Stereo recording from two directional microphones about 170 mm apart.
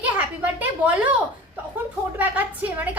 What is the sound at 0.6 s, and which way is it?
Speech, 10° right (ahead or behind).